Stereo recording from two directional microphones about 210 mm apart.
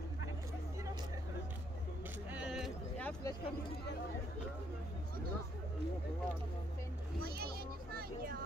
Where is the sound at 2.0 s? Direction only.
10° right (ahead or behind); by 3.3 s 5° left (ahead or behind).